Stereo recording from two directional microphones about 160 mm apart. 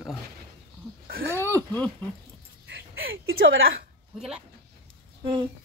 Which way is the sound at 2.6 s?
80° right.